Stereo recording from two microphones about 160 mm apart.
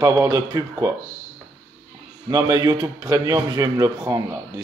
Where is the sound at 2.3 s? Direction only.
25° right (ahead or behind).